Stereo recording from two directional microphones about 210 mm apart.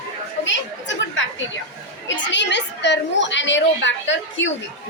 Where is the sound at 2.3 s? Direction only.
55° left (ahead or behind).